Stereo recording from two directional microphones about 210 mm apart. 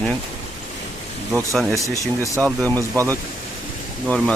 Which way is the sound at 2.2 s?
15° left (ahead or behind).